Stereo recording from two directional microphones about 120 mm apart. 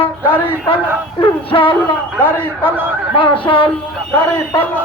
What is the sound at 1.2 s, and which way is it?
Speech, 45° left (ahead or behind).